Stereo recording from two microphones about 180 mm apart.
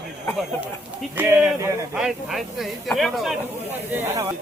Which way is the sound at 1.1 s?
15° right (ahead or behind).